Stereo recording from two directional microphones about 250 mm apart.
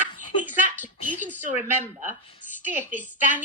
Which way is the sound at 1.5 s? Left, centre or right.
Centre.